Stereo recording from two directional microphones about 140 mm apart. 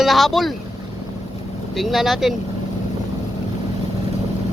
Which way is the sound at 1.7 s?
Centre (ahead or behind).